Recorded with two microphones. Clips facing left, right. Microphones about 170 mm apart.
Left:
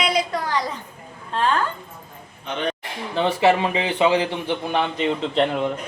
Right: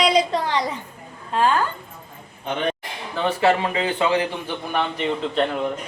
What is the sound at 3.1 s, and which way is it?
Speech, 20° left (ahead or behind).